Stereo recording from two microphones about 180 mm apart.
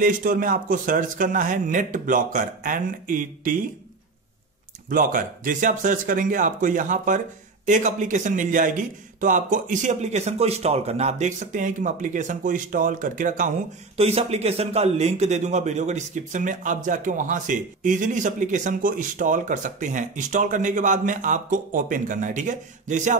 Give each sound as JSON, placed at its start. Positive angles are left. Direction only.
{"t": 0.0, "sound": "a man's voice", "side_deg": -50}
{"t": 4.8, "sound": "a man's voice", "side_deg": -50}
{"t": 13.9, "sound": "a man's voice", "side_deg": -35}